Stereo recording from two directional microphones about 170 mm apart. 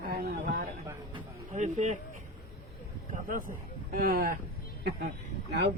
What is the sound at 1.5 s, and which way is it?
Speech, 45° right (ahead or behind).